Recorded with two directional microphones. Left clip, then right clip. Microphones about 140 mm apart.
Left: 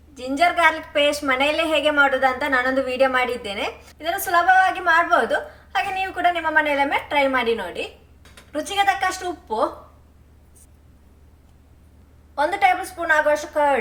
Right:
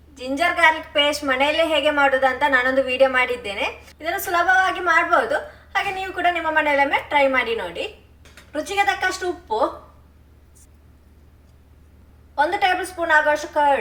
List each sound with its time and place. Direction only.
0.2 s a woman's voice: 20° left (ahead or behind)
12.3 s a woman's voice: 30° left (ahead or behind)